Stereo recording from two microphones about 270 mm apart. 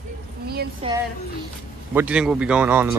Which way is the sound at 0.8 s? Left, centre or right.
Right.